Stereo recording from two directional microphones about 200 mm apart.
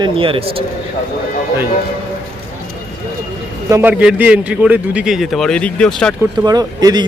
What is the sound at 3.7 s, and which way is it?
A man's voice, 10° right (ahead or behind).